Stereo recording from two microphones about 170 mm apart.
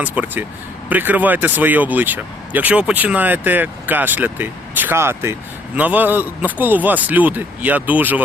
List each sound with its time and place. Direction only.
0.0 s speech: 10° right (ahead or behind)